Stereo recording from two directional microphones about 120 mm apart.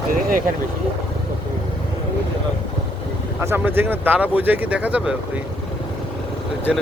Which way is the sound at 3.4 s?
20° right (ahead or behind).